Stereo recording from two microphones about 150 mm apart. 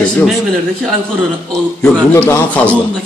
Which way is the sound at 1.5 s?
5° left (ahead or behind).